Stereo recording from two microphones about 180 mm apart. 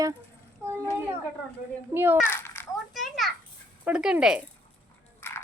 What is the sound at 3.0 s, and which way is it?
Children playing, centre (ahead or behind).